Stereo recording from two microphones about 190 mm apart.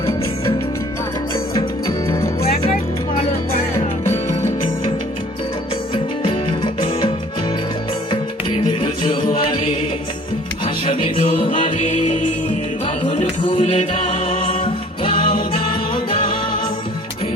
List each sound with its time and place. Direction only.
1.5 s music: 15° left (ahead or behind)
5.9 s music: 25° left (ahead or behind)
13.1 s music: 30° left (ahead or behind)